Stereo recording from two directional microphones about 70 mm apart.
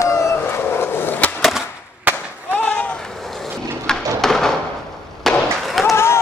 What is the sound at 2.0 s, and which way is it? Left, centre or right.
Fireworks, right.